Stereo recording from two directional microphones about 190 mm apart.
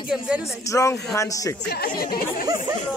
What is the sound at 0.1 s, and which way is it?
Speech, 5° right (ahead or behind).